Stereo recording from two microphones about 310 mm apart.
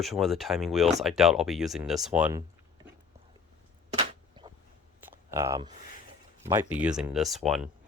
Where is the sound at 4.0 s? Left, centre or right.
Centre.